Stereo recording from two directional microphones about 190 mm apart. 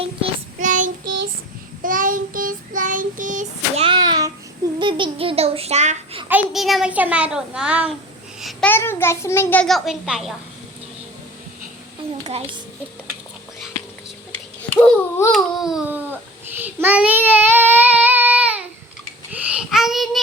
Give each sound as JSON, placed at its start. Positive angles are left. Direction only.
{"t": 0.6, "sound": "child singing", "side_deg": -40}
{"t": 3.8, "sound": "a sound", "side_deg": -20}
{"t": 4.8, "sound": "child singing", "side_deg": -25}
{"t": 6.2, "sound": "a child's voice", "side_deg": -5}
{"t": 8.4, "sound": "babbling", "side_deg": 0}
{"t": 8.7, "sound": "a child's voice", "side_deg": 10}
{"t": 14.6, "sound": "babbling", "side_deg": 5}
{"t": 19.3, "sound": "child singing", "side_deg": -5}